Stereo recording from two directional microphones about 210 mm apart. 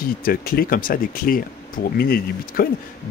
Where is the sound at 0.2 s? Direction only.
45° left (ahead or behind).